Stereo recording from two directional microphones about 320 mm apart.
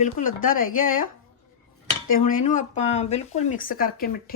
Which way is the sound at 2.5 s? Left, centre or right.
Left.